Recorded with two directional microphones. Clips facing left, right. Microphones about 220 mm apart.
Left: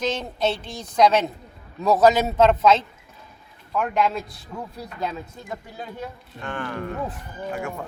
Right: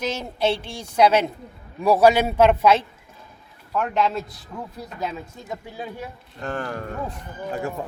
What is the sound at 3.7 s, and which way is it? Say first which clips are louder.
Speech: even; centre (ahead or behind).